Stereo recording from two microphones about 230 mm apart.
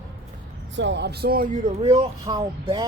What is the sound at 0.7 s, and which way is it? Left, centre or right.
Speech, right.